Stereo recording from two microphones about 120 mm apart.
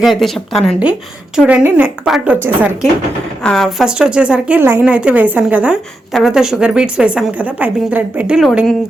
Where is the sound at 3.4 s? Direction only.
5° left (ahead or behind).